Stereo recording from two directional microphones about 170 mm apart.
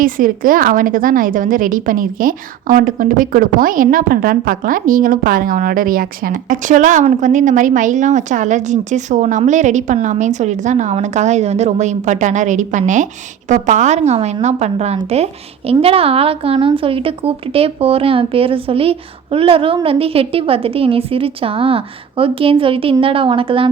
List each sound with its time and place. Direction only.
0.0 s a woman's voice: 55° right (ahead or behind); by 23.6 s 30° right (ahead or behind)